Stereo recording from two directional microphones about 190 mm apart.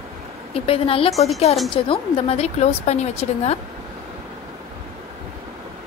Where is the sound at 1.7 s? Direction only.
30° left (ahead or behind).